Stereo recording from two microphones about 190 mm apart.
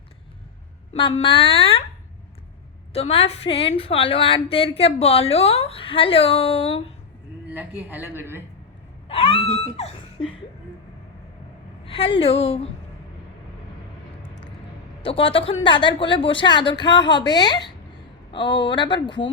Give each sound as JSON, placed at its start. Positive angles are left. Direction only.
{"t": 0.9, "sound": "speech", "side_deg": 25}
{"t": 2.9, "sound": "a woman's voice", "side_deg": 30}
{"t": 7.5, "sound": "a woman's voice", "side_deg": -10}
{"t": 9.0, "sound": "speech", "side_deg": 30}
{"t": 11.9, "sound": "a woman's voice", "side_deg": 30}
{"t": 15.0, "sound": "speech", "side_deg": 30}